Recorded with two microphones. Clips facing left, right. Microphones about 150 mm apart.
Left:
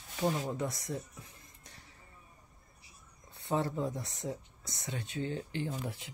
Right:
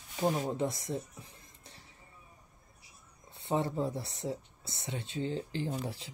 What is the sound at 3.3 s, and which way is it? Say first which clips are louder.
Speech: right 1 dB; 25° right (ahead or behind).